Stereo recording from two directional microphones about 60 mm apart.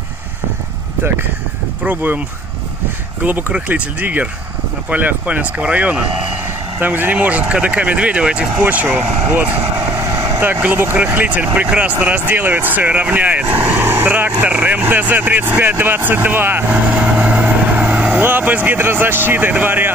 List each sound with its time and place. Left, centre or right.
1.9 s speech: right
3.3 s speech: right
8.8 s speech: right
10.0 s vehicle: right
10.6 s speech: right
16.7 s vehicle: right
18.8 s speech: right